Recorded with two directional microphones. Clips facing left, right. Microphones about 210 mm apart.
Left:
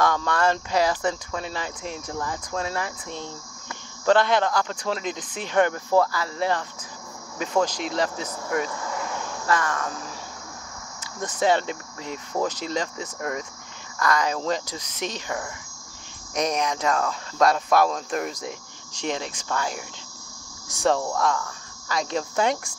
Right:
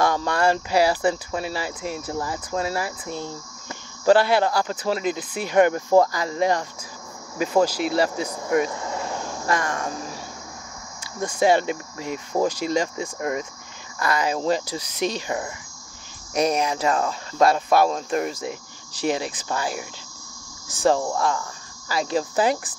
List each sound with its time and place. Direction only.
0.0 s speech: 10° right (ahead or behind); by 9.9 s 30° right (ahead or behind)
11.1 s speech: 10° right (ahead or behind)
16.3 s speech: 10° right (ahead or behind)